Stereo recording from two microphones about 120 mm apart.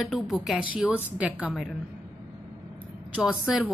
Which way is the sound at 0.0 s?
Centre (ahead or behind).